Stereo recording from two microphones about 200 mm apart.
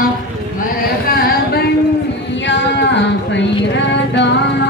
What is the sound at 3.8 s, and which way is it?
Music, 60° left (ahead or behind).